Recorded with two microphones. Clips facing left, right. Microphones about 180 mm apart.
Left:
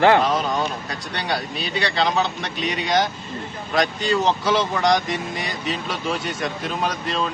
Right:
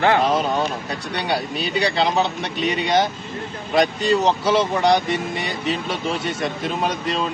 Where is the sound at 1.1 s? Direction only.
10° right (ahead or behind).